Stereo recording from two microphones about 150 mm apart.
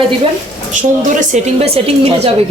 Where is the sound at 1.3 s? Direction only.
40° right (ahead or behind).